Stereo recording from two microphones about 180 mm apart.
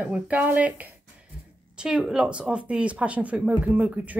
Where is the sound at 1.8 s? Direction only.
5° right (ahead or behind).